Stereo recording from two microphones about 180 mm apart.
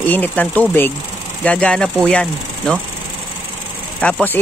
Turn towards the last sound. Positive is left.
turn(degrees=5)  # may be behind; listen again after turning